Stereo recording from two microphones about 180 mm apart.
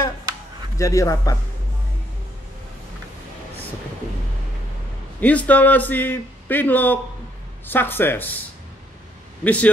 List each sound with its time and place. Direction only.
0.7 s speech: 15° left (ahead or behind)
5.2 s speech: 10° left (ahead or behind)
9.4 s speech: 10° left (ahead or behind)